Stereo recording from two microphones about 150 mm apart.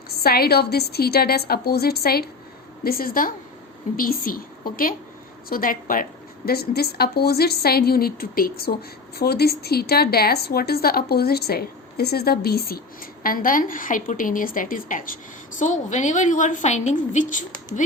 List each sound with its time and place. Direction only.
0.2 s a woman's voice: 90° left
2.8 s a woman's voice: 75° left (ahead or behind); by 17.4 s 55° left (ahead or behind)